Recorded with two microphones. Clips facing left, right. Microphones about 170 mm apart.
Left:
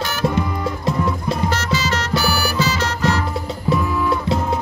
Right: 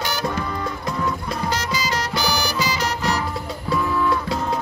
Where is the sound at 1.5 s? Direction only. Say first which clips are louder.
Left 3 dB; 15° right (ahead or behind).